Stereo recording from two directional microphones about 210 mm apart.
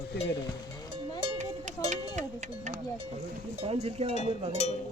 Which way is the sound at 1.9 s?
35° right (ahead or behind).